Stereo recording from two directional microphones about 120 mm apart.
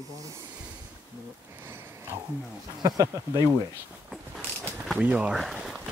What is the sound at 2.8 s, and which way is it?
Speech, 35° right (ahead or behind).